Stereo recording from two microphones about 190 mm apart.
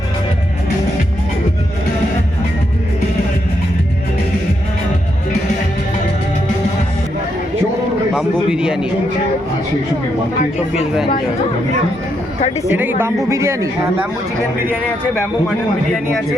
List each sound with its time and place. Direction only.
8.1 s a man's voice: 5° right (ahead or behind)
12.4 s speech: 35° left (ahead or behind)
13.0 s speech: 15° right (ahead or behind)